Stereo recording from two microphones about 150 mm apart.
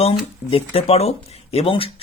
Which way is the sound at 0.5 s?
40° left (ahead or behind).